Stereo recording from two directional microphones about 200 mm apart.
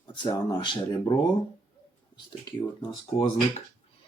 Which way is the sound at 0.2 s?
20° left (ahead or behind).